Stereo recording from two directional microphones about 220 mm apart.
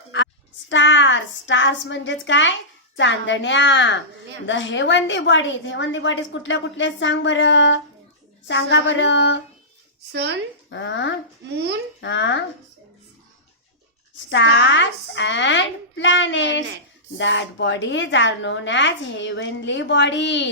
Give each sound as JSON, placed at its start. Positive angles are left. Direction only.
{"t": 0.7, "sound": "a woman's voice", "side_deg": 55}
{"t": 10.1, "sound": "speech", "side_deg": -50}
{"t": 10.7, "sound": "a woman's voice", "side_deg": 55}
{"t": 11.5, "sound": "speech", "side_deg": -50}
{"t": 11.9, "sound": "a woman's voice", "side_deg": 55}
{"t": 14.3, "sound": "a woman's voice", "side_deg": 55}